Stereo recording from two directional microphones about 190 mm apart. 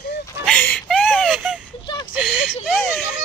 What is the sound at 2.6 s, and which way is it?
Baby cry, centre (ahead or behind).